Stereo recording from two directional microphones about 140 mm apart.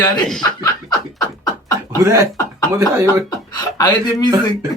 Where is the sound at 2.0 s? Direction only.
20° right (ahead or behind).